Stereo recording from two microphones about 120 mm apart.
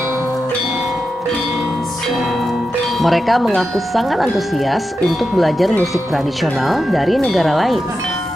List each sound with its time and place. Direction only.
3.0 s speech: centre (ahead or behind)